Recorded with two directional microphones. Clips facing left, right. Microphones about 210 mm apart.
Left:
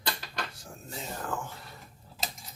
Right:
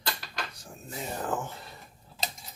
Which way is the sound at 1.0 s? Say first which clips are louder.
Right 4 dB; 20° right (ahead or behind).